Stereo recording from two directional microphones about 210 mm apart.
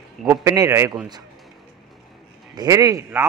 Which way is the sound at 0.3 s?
15° right (ahead or behind).